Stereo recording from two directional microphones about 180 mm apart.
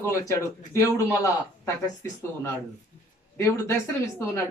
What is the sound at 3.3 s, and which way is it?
Speech, 15° left (ahead or behind).